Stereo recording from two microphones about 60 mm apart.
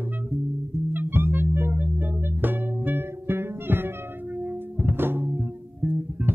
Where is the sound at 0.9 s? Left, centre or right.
Right.